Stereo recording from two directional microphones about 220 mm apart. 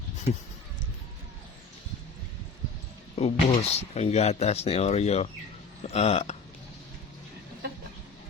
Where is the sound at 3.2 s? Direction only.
30° left (ahead or behind).